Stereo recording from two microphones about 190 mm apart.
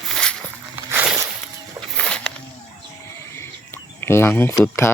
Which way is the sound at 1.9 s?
5° left (ahead or behind).